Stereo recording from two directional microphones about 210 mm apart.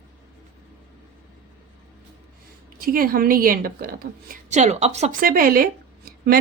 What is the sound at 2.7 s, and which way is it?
A woman's voice, 45° right (ahead or behind).